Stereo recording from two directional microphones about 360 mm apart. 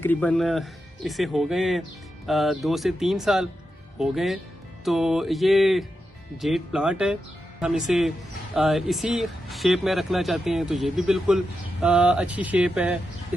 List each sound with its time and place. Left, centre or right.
0.0 s speech: centre